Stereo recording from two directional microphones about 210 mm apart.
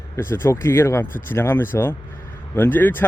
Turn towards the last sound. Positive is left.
turn(degrees=10)  # may be behind; listen again after turning